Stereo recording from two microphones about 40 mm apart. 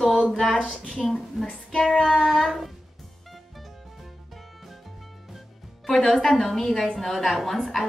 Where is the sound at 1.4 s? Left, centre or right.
Centre.